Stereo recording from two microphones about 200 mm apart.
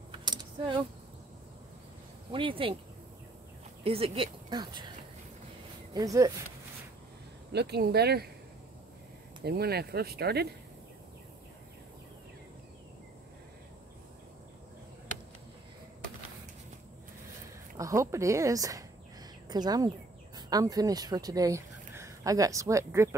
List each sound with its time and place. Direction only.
0.2 s a sound: 20° right (ahead or behind)
2.3 s speech: 25° right (ahead or behind)
3.8 s speech: 30° right (ahead or behind)
5.9 s speech: 15° right (ahead or behind)
7.5 s speech: 55° right (ahead or behind)
9.4 s speech: 55° right (ahead or behind)
17.7 s speech: 15° right (ahead or behind)